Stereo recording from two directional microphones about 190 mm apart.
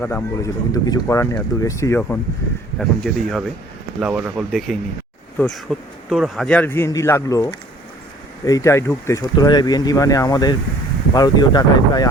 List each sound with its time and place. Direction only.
0.0 s speech: 10° left (ahead or behind)